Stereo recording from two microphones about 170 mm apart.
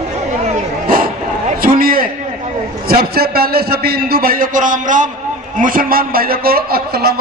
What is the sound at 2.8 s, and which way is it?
A man's voice, 65° right (ahead or behind).